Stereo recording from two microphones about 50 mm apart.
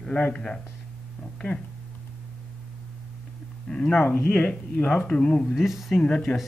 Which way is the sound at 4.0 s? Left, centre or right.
Left.